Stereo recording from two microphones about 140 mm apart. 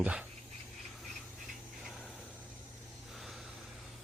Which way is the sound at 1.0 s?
Centre (ahead or behind).